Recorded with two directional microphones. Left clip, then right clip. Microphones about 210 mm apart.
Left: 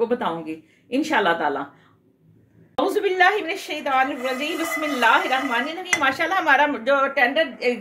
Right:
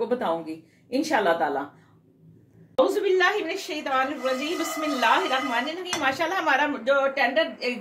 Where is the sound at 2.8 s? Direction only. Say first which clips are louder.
Left 3 dB; 55° left (ahead or behind).